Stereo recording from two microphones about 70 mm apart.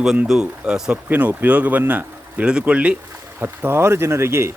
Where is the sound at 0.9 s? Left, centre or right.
Right.